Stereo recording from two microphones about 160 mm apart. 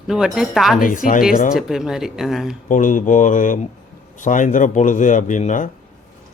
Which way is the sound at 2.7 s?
55° left (ahead or behind).